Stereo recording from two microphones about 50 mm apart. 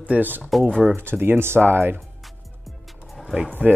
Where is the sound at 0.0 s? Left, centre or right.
Right.